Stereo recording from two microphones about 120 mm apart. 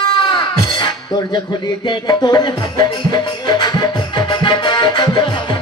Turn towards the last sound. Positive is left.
turn(degrees=40)  # may be behind; listen again after turning